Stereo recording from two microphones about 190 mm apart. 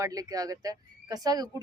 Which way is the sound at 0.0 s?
20° right (ahead or behind).